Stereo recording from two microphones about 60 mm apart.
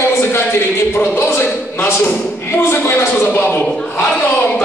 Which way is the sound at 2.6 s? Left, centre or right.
Left.